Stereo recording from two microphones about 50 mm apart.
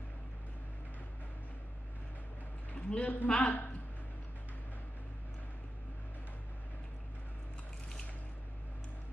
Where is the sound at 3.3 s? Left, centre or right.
Left.